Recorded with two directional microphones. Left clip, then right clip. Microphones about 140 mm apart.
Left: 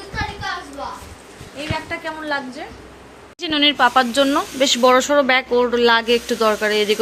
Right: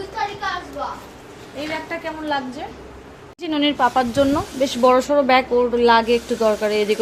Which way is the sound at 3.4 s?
Centre (ahead or behind).